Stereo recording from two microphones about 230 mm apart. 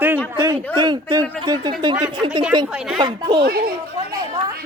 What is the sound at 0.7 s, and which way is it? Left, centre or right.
Speech, centre.